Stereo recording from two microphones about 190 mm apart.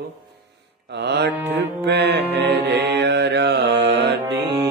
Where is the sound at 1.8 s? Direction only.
60° right (ahead or behind).